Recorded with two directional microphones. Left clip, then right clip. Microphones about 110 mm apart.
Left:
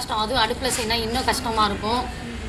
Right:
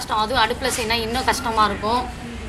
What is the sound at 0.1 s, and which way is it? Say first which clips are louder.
A woman's voice: right 3 dB; 15° right (ahead or behind).